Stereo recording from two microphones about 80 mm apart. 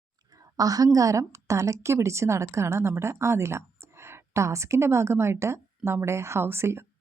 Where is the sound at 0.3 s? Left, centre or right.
Right.